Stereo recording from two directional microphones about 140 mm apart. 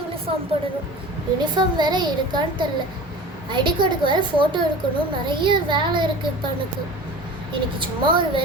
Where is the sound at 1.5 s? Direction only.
30° right (ahead or behind).